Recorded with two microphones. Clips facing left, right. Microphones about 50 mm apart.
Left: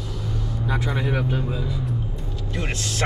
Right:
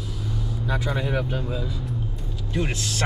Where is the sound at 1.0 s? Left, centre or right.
Centre.